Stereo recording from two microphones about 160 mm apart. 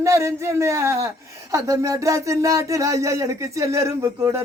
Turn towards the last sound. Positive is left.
turn(degrees=-15)  # may be behind; listen again after turning